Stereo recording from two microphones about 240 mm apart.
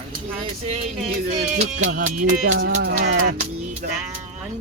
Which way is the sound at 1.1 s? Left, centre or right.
Right.